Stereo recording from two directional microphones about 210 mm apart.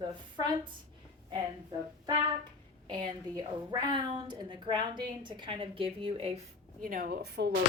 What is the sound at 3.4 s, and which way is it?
A woman's voice, 20° right (ahead or behind).